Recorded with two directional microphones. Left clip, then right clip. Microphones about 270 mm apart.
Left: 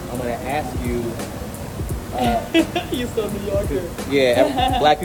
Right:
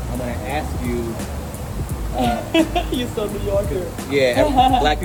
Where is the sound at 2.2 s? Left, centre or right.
Centre.